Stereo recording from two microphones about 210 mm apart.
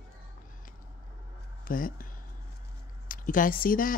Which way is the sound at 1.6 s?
40° left (ahead or behind).